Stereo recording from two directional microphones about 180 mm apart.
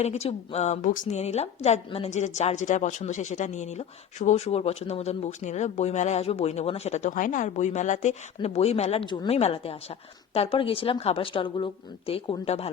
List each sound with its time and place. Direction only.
0.0 s a woman's voice: 35° left (ahead or behind)